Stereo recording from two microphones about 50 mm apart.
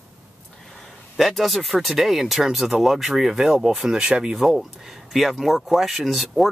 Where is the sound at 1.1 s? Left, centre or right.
Centre.